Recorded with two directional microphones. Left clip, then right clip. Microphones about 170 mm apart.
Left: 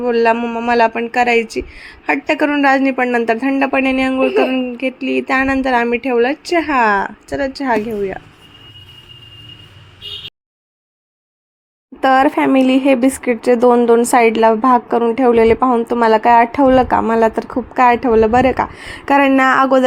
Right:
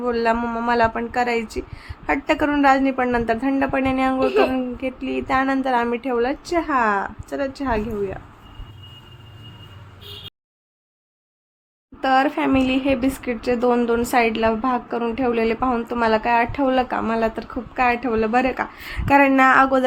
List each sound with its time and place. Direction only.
0.0 s speech: 20° left (ahead or behind)
11.9 s speech: 30° left (ahead or behind)